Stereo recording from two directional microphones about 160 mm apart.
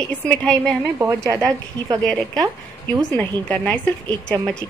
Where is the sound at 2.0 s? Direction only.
5° left (ahead or behind).